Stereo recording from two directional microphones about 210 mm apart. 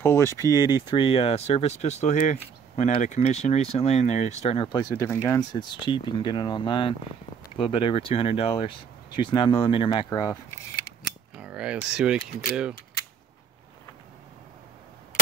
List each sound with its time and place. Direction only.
0.0 s speech: 10° left (ahead or behind); by 4.6 s 30° left (ahead or behind)
4.7 s speech: 15° left (ahead or behind)
11.3 s speech: 5° right (ahead or behind)